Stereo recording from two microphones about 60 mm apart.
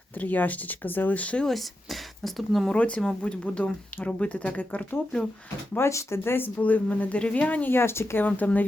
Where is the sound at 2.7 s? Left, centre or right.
Left.